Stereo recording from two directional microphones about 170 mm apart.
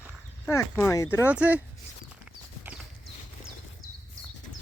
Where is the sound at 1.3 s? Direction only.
10° right (ahead or behind).